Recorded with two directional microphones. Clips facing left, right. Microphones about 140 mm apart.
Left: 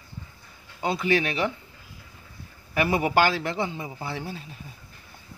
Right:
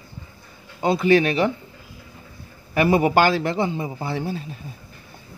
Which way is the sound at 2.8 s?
35° right (ahead or behind).